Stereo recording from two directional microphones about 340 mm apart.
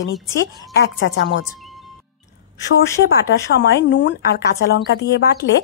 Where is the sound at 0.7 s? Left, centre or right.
Left.